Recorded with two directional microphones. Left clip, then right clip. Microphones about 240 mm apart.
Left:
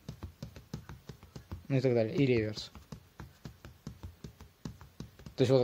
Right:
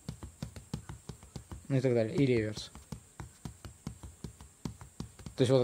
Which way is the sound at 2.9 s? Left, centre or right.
Centre.